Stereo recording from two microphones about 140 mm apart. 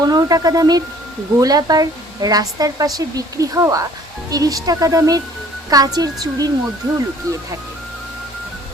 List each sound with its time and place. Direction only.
0.0 s a woman's voice: 25° right (ahead or behind)